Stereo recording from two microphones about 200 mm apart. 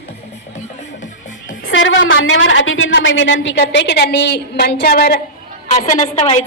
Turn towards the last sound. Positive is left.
turn(degrees=35)  # may be behind; listen again after turning